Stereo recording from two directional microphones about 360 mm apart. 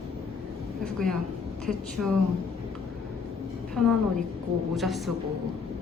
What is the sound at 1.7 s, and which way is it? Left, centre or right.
Speech, centre.